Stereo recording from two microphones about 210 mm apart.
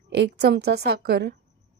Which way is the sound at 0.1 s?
55° right (ahead or behind).